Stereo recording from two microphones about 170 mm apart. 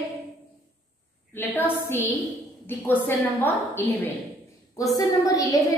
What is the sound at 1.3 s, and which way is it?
A woman's voice, 10° left (ahead or behind).